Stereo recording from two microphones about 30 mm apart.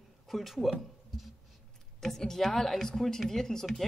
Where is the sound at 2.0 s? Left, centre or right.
Centre.